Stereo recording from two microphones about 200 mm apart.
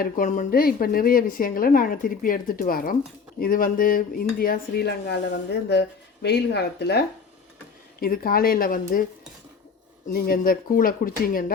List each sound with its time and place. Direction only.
0.0 s a woman's voice: 40° left (ahead or behind)
8.0 s a woman's voice: 45° left (ahead or behind)
10.1 s a woman's voice: 50° left (ahead or behind)